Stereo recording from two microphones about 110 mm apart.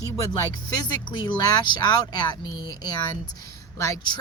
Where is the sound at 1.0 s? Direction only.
35° left (ahead or behind).